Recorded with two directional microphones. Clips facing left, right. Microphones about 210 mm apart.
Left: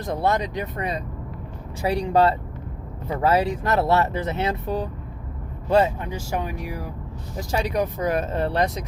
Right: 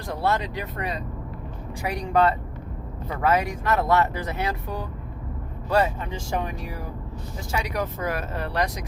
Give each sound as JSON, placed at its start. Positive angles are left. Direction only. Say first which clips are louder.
{"t": 0.0, "sound": "speech", "louder": "left 3 dB", "side_deg": 20}
{"t": 6.1, "sound": "speech", "louder": "left 1 dB", "side_deg": 10}
{"t": 7.5, "sound": "speech", "louder": "left 4 dB", "side_deg": 25}